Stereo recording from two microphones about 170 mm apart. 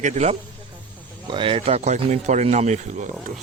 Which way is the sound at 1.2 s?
30° right (ahead or behind).